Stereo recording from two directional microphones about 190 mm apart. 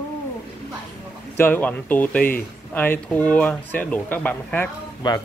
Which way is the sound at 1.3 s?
10° left (ahead or behind).